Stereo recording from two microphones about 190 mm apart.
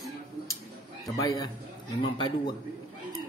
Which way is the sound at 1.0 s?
20° left (ahead or behind).